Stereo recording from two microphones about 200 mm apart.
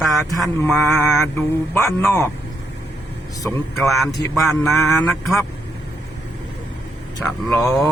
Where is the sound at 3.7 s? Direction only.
Centre (ahead or behind).